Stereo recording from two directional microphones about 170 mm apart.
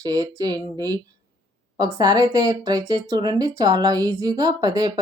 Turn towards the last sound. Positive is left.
turn(degrees=-25)  # may be behind; listen again after turning